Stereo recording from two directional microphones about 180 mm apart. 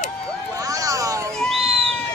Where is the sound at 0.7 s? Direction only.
20° right (ahead or behind).